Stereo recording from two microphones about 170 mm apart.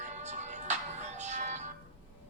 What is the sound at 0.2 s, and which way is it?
Music, 45° right (ahead or behind).